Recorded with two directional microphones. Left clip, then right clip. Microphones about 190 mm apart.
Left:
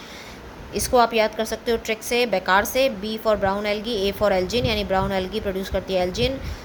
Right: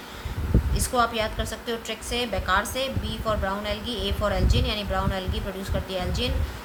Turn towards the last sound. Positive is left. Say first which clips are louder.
# left 7 dB
turn(degrees=40)  # may be behind; listen again after turning